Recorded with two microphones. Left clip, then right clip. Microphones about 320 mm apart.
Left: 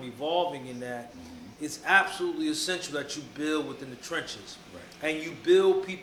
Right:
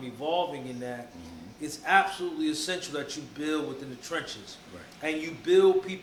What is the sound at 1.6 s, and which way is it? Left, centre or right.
A man's voice, centre.